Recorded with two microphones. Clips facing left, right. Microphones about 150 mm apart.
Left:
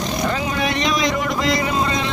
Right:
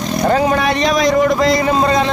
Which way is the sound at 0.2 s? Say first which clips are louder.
Right 10 dB; 45° right (ahead or behind).